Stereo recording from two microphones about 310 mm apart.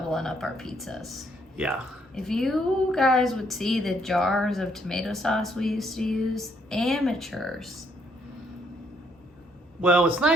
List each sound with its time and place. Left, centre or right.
0.1 s a woman's voice: centre
9.8 s a woman's voice: centre